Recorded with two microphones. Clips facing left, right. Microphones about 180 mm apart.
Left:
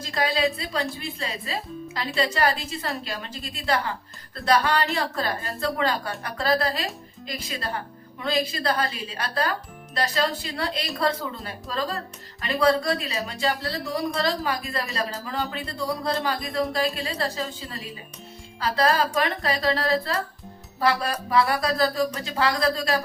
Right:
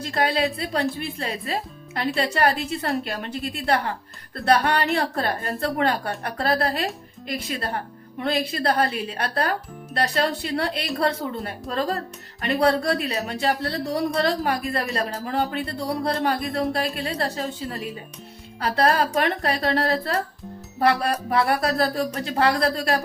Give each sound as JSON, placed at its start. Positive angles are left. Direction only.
{"t": 0.0, "sound": "speech", "side_deg": -60}